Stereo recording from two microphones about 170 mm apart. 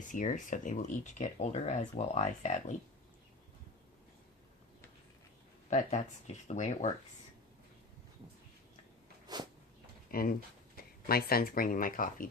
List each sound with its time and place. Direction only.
0.1 s speech: 50° left (ahead or behind)
5.7 s speech: 45° left (ahead or behind)
9.2 s a sound: 25° right (ahead or behind)
10.1 s speech: 60° left (ahead or behind)